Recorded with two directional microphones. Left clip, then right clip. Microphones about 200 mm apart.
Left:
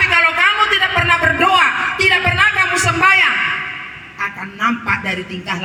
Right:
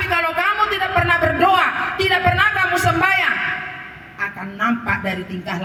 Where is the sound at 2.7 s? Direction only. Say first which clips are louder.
Left 2 dB; 65° right (ahead or behind).